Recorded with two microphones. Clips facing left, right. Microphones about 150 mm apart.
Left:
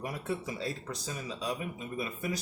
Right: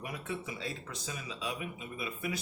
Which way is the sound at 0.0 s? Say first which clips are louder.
Left 4 dB; 40° left (ahead or behind).